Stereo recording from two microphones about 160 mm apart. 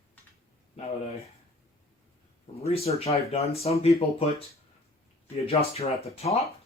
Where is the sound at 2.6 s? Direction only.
40° left (ahead or behind).